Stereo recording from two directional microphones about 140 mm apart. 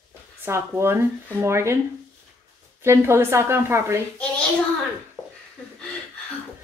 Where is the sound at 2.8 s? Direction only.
20° right (ahead or behind).